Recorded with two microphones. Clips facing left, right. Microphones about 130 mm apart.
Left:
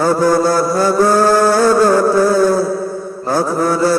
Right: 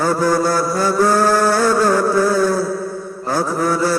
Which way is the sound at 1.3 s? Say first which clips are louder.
Left 4 dB; 45° left (ahead or behind).